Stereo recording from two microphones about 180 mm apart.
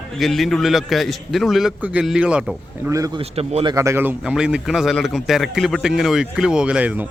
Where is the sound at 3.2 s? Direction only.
35° right (ahead or behind).